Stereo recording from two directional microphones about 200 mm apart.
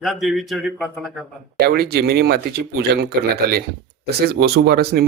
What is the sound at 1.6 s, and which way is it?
Speech, 50° right (ahead or behind).